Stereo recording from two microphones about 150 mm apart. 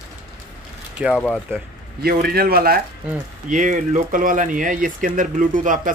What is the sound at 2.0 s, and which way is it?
Speech, 90° right.